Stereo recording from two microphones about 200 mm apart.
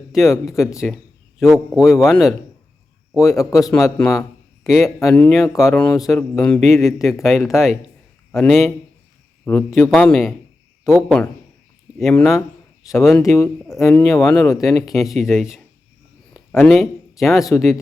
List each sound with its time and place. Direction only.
0.1 s speech: centre (ahead or behind)
3.2 s speech: 15° left (ahead or behind)
3.6 s speech: centre (ahead or behind)
13.7 s speech: 15° left (ahead or behind)
14.1 s speech: centre (ahead or behind)